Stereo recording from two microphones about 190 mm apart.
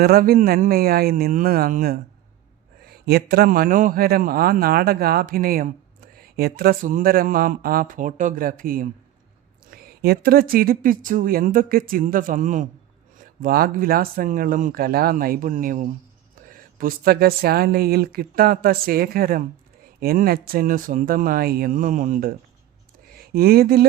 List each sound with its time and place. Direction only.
0.0 s speech: 50° right (ahead or behind)